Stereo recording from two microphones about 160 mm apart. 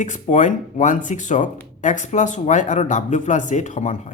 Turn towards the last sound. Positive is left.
turn(degrees=50)  # may be behind; listen again after turning